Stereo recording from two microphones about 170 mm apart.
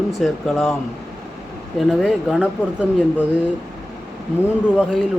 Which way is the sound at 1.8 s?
Centre (ahead or behind).